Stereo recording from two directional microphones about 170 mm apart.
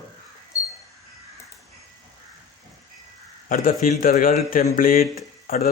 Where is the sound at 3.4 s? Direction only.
55° left (ahead or behind).